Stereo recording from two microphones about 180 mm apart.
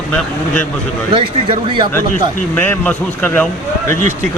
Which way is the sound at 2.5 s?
10° left (ahead or behind).